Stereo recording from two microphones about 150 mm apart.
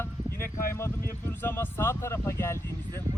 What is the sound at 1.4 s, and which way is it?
Speech, 15° left (ahead or behind).